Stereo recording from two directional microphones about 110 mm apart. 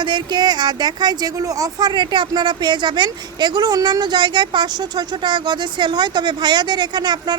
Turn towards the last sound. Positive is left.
turn(degrees=-40)  # may be behind; listen again after turning